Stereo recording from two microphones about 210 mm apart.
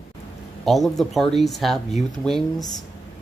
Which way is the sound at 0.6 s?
Centre (ahead or behind).